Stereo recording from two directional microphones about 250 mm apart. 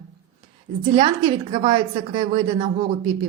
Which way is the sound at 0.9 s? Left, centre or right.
Centre.